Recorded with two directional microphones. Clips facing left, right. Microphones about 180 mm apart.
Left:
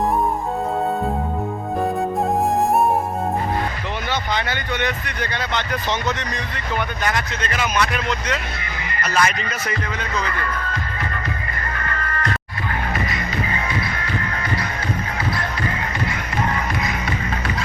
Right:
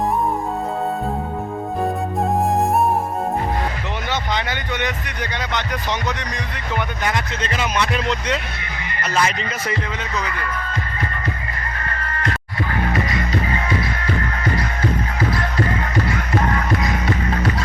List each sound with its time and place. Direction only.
4.1 s speech: 20° right (ahead or behind)
7.0 s speech: 25° right (ahead or behind)